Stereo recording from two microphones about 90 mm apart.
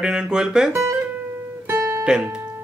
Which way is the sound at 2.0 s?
10° right (ahead or behind).